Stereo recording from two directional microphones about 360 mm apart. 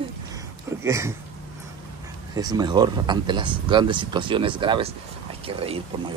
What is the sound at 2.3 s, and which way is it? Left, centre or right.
Speech, centre.